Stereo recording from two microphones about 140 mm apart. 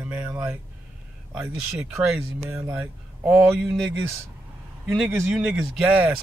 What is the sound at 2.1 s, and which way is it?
Speech, 5° right (ahead or behind).